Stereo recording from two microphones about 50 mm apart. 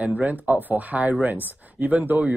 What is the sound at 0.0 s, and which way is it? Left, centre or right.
Speech, right.